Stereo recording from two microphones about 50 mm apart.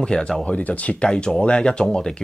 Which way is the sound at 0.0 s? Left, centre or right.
Centre.